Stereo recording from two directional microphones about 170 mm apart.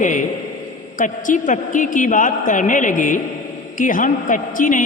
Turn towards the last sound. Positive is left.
turn(degrees=50)  # may be behind; listen again after turning